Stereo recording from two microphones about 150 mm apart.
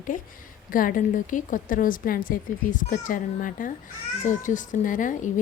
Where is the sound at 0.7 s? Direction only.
70° left (ahead or behind).